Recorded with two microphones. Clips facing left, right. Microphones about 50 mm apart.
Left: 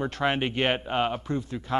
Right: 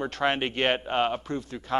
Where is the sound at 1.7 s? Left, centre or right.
Centre.